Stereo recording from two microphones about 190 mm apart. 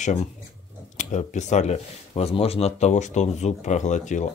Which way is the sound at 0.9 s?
40° left (ahead or behind).